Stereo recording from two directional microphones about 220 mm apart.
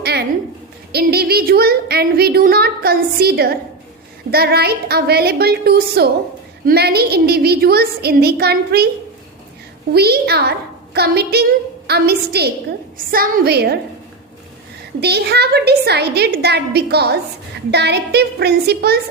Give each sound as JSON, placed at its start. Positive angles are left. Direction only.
{"t": 0.0, "sound": "a sound", "side_deg": -45}
{"t": 0.9, "sound": "a woman's voice", "side_deg": -45}
{"t": 9.9, "sound": "a woman's voice", "side_deg": -45}
{"t": 15.0, "sound": "a woman's voice", "side_deg": -50}